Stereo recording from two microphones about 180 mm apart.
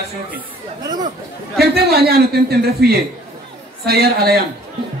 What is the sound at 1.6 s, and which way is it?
A man's voice, 60° right (ahead or behind).